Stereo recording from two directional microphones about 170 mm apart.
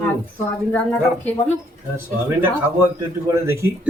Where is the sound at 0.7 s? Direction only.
10° left (ahead or behind).